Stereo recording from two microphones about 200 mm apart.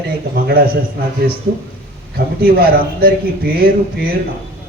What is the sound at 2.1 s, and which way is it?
A man's voice, 50° right (ahead or behind).